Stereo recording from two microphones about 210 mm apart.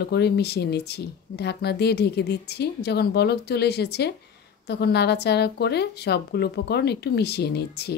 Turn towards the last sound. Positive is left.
turn(degrees=50)  # may be behind; listen again after turning